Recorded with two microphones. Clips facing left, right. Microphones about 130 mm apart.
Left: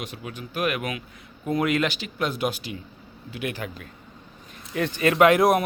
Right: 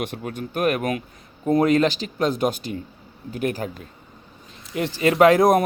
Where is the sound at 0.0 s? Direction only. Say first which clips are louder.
Right 7 dB; 50° right (ahead or behind).